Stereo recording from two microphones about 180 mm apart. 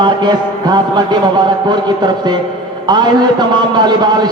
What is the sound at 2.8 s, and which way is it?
A man's voice, 25° right (ahead or behind).